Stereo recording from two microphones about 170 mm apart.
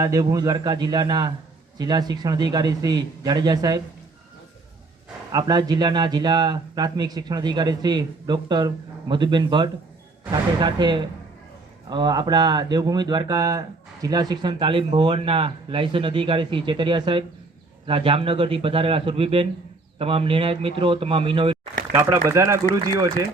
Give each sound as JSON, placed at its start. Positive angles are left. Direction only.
{"t": 0.0, "sound": "speech", "side_deg": -20}
{"t": 5.3, "sound": "speech", "side_deg": -25}
{"t": 21.9, "sound": "speech", "side_deg": -15}